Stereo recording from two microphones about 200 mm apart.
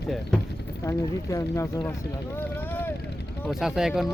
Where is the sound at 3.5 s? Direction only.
Centre (ahead or behind).